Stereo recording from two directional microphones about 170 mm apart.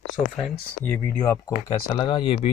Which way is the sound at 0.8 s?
10° left (ahead or behind).